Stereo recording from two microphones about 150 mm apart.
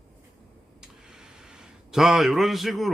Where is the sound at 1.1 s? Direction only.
5° right (ahead or behind).